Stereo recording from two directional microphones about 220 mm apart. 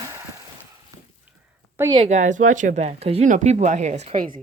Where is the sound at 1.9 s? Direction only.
30° right (ahead or behind).